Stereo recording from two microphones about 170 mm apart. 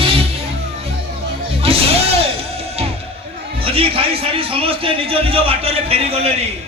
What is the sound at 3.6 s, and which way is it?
A man's voice, 35° right (ahead or behind).